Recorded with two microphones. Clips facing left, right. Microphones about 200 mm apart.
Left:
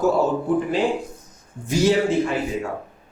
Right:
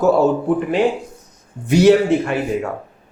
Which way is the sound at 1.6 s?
65° right (ahead or behind).